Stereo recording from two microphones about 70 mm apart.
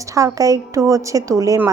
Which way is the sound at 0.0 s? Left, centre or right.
Right.